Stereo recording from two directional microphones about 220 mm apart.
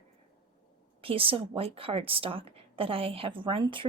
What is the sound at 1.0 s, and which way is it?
A woman's voice, 25° right (ahead or behind).